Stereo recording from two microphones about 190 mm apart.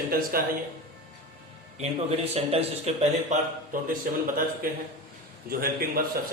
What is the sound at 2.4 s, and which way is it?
A man's voice, 30° right (ahead or behind).